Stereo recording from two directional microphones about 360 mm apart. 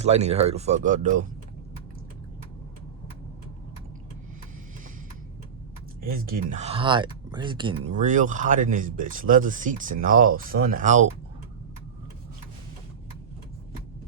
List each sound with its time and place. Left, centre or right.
0.0 s speech: centre
6.0 s speech: right